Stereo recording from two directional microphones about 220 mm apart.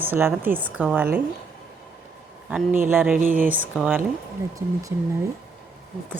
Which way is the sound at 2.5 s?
5° right (ahead or behind).